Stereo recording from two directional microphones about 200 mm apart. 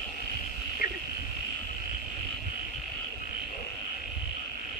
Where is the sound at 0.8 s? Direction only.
50° left (ahead or behind).